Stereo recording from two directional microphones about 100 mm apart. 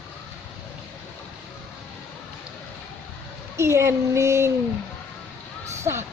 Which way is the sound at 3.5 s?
30° right (ahead or behind).